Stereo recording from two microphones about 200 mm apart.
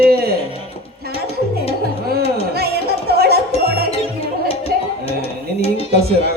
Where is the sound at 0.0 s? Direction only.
50° right (ahead or behind).